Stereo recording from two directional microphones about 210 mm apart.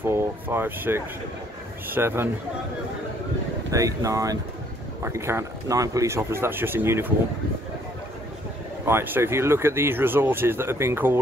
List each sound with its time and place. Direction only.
0.0 s speech: 10° right (ahead or behind)
3.7 s speech: 15° right (ahead or behind)
8.8 s speech: 10° right (ahead or behind)